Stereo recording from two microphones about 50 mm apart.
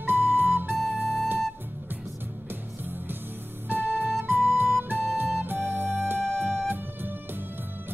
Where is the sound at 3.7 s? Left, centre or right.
Right.